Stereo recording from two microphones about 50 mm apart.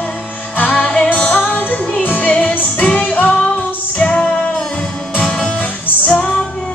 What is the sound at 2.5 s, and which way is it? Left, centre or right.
Music, left.